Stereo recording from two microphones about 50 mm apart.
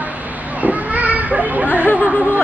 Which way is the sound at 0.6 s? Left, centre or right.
Right.